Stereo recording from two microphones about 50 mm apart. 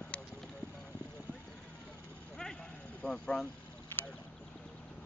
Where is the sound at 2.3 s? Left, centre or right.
Centre.